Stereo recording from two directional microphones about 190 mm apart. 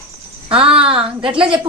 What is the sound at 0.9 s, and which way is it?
Speech, 30° right (ahead or behind).